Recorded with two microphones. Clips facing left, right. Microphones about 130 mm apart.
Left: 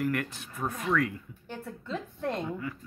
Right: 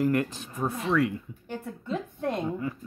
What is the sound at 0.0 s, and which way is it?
Speech, 25° right (ahead or behind).